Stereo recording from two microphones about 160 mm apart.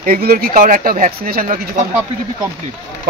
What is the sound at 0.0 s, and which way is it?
Speech, 65° right (ahead or behind).